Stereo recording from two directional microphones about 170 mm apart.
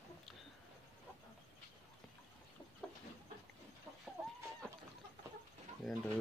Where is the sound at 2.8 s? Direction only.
5° left (ahead or behind).